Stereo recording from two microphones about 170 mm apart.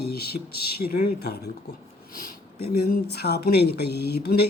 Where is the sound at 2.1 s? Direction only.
60° left (ahead or behind).